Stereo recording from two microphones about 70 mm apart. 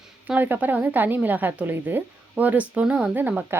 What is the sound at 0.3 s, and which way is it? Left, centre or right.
A woman's voice, right.